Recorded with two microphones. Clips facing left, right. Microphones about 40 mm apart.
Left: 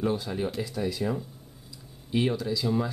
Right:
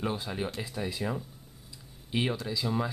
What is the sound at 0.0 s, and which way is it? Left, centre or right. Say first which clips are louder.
Speech: left 4 dB; centre.